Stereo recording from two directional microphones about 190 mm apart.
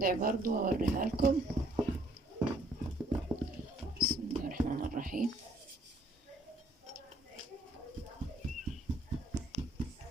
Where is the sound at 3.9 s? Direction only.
50° right (ahead or behind).